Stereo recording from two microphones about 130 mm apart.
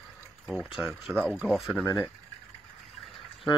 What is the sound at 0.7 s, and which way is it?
Speech, 5° right (ahead or behind).